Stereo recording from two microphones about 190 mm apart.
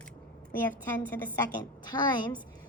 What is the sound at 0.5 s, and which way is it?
Speech, 10° left (ahead or behind).